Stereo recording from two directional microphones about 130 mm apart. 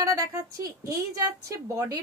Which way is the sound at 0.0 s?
25° right (ahead or behind).